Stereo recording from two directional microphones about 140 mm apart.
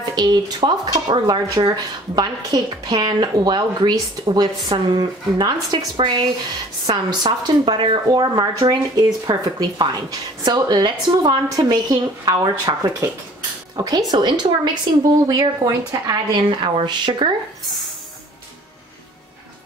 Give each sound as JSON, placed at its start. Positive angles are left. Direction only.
{"t": 0.0, "sound": "speech", "side_deg": -30}